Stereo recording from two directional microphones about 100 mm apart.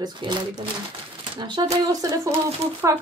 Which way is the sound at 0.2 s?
50° right (ahead or behind).